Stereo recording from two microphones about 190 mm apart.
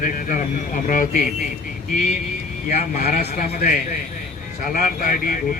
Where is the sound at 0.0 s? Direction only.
45° left (ahead or behind).